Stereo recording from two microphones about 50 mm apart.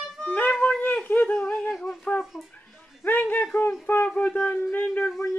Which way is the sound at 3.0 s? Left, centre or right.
Left.